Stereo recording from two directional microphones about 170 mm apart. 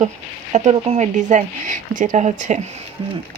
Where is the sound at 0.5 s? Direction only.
40° right (ahead or behind).